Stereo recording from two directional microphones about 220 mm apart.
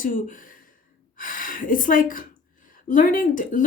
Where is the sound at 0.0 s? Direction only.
40° left (ahead or behind).